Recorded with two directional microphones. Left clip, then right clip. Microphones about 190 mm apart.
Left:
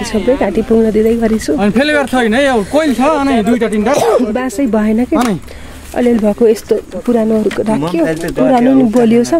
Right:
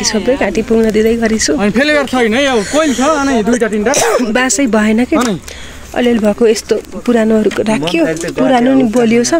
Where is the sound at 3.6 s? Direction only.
55° left (ahead or behind).